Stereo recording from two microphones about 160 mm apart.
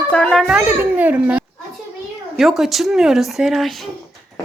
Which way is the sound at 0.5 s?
10° right (ahead or behind).